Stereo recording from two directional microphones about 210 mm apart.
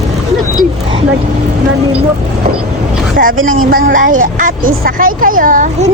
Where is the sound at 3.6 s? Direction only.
45° right (ahead or behind).